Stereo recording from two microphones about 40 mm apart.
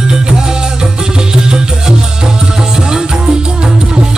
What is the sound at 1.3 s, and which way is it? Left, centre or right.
Music, centre.